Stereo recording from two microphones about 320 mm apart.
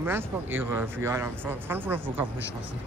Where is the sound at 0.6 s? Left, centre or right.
Centre.